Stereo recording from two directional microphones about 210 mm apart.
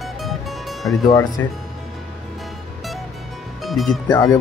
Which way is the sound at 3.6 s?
Centre (ahead or behind).